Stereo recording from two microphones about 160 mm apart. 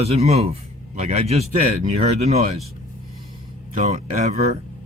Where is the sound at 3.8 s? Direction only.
40° right (ahead or behind).